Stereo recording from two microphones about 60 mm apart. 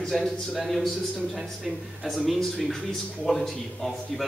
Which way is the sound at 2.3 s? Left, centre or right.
Centre.